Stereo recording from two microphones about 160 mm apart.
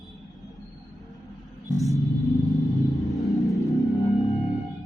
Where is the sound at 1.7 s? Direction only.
20° left (ahead or behind).